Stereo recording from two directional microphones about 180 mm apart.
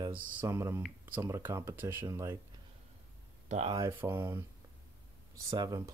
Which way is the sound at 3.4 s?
40° right (ahead or behind).